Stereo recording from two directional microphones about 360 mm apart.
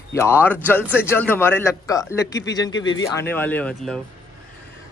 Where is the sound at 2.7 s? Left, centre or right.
Left.